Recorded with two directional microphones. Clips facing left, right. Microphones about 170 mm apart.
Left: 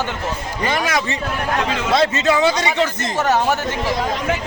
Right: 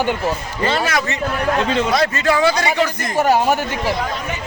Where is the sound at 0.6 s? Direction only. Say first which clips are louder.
Right 1 dB; 15° left (ahead or behind).